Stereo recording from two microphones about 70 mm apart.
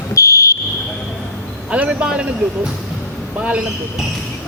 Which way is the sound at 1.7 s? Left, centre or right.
Centre.